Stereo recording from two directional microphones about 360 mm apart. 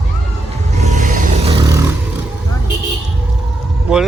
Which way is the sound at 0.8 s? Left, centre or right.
Centre.